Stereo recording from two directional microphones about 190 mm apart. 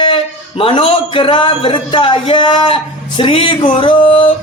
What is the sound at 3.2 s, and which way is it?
Music, 30° left (ahead or behind).